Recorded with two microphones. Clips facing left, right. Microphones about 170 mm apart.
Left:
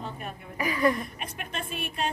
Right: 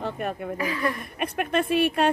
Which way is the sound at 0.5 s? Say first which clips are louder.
Left 5 dB; 10° left (ahead or behind).